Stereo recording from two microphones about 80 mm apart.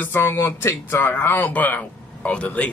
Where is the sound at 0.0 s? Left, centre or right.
Left.